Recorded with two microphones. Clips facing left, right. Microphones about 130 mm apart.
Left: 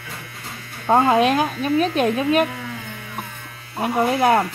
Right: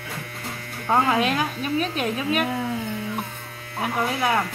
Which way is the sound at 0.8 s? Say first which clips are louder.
Left 5 dB; 30° left (ahead or behind).